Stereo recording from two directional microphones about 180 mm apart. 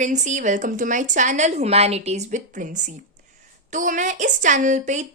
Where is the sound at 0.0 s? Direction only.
40° right (ahead or behind).